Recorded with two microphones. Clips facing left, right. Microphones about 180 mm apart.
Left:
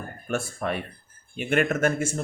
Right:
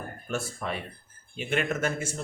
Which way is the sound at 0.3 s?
55° left (ahead or behind).